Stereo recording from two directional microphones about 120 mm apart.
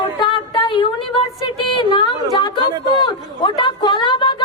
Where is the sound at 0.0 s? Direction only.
40° left (ahead or behind).